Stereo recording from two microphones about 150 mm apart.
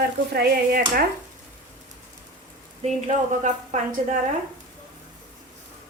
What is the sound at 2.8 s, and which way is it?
Speech, 50° right (ahead or behind).